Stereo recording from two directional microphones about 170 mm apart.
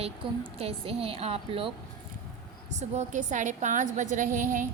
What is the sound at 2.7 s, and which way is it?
A woman's voice, 45° right (ahead or behind).